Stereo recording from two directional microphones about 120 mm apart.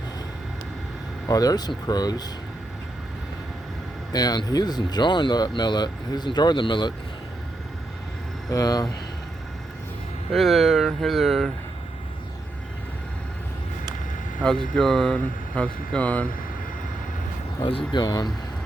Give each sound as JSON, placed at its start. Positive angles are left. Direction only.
{"t": 1.3, "sound": "speech", "side_deg": 30}
{"t": 4.1, "sound": "speech", "side_deg": 35}
{"t": 8.4, "sound": "speech", "side_deg": 30}
{"t": 10.3, "sound": "speech", "side_deg": 0}
{"t": 14.4, "sound": "speech", "side_deg": 5}
{"t": 17.6, "sound": "speech", "side_deg": 45}